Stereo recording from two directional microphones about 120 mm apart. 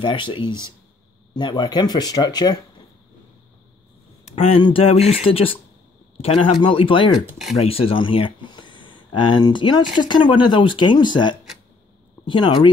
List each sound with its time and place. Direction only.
0.0 s speech: 45° left (ahead or behind)
0.5 s speech: 25° right (ahead or behind)
1.3 s speech: 35° left (ahead or behind)
4.2 s speech: 55° left (ahead or behind); by 12.6 s 40° left (ahead or behind)